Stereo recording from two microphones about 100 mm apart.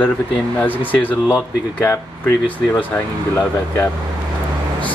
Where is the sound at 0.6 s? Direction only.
15° left (ahead or behind).